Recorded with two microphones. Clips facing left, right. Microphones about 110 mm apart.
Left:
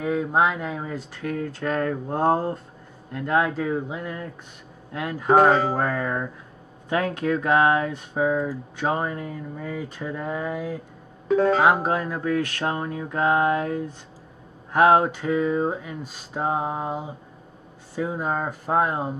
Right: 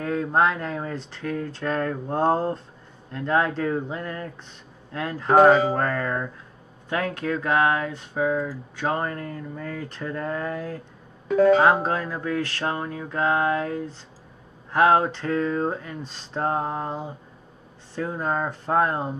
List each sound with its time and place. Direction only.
0.0 s speech: 10° left (ahead or behind)
5.3 s speech: centre (ahead or behind)
5.7 s speech: 10° left (ahead or behind)
11.2 s speech: 35° left (ahead or behind)
11.6 s speech: 10° left (ahead or behind)